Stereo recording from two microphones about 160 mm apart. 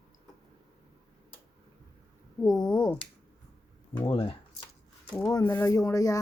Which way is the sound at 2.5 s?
5° left (ahead or behind).